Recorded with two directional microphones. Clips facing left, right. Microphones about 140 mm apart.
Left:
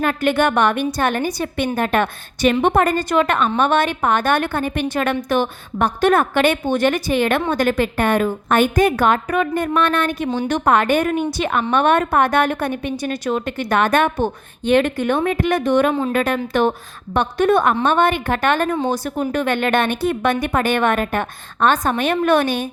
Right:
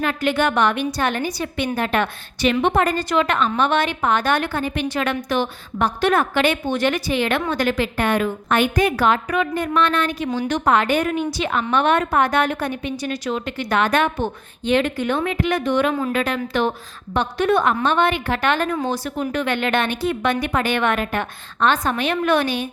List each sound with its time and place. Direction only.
0.0 s a woman's voice: 50° left (ahead or behind)
10.2 s a woman's voice: 25° left (ahead or behind)
10.5 s a woman's voice: 50° left (ahead or behind)